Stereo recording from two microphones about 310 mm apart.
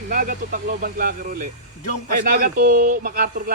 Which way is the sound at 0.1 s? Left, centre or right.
Right.